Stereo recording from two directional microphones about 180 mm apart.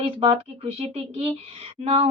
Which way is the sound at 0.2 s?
30° right (ahead or behind).